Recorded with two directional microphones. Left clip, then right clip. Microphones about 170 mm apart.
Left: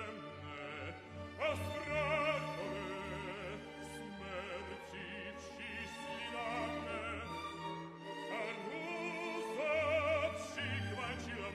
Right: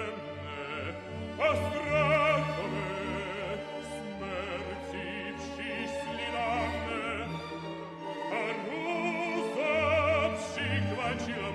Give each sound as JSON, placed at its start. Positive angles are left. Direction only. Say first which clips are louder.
{"t": 1.4, "sound": "music", "louder": "right 10 dB", "side_deg": 30}
{"t": 9.6, "sound": "opera", "louder": "right 7 dB", "side_deg": 35}